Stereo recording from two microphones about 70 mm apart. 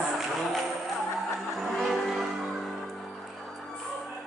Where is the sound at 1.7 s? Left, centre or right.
Centre.